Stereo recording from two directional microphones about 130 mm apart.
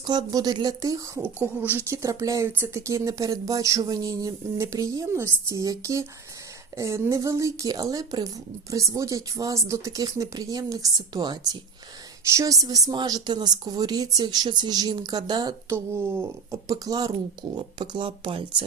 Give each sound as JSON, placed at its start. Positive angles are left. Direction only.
{"t": 0.0, "sound": "a woman's voice", "side_deg": -35}
{"t": 15.7, "sound": "a woman's voice", "side_deg": -20}